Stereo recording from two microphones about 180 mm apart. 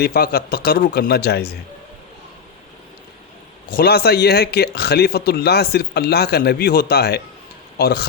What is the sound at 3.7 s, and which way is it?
Speech, 60° left (ahead or behind).